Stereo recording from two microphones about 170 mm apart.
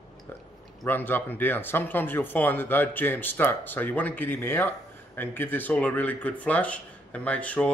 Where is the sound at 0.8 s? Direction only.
10° left (ahead or behind).